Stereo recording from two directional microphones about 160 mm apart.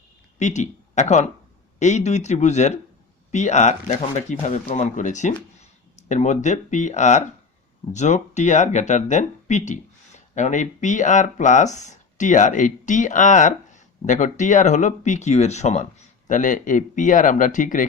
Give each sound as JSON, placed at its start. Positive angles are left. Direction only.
{"t": 0.3, "sound": "speech", "side_deg": 45}